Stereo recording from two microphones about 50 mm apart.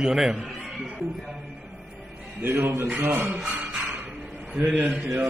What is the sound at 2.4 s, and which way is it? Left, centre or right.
Speech, right.